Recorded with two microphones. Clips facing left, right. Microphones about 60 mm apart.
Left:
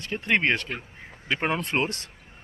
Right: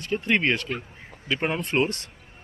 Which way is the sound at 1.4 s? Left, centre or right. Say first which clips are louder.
Right 2 dB; left.